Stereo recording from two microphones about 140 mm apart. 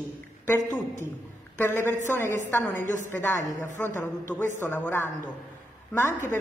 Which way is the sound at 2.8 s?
60° right (ahead or behind).